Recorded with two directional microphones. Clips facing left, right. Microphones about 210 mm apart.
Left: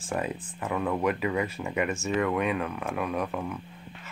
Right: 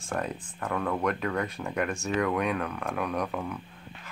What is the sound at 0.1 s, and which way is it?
Speech, 5° left (ahead or behind).